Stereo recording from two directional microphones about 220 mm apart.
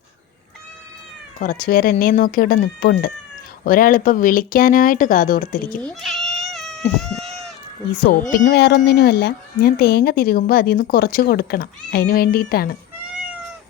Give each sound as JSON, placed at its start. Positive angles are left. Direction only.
{"t": 1.4, "sound": "speech", "side_deg": 40}
{"t": 5.8, "sound": "cat", "side_deg": 0}
{"t": 8.4, "sound": "speech", "side_deg": 50}